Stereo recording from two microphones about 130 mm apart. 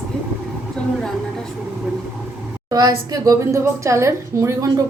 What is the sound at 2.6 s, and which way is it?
A woman's voice, 30° right (ahead or behind).